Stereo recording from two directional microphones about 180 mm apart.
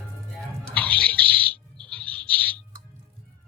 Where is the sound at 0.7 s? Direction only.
10° left (ahead or behind).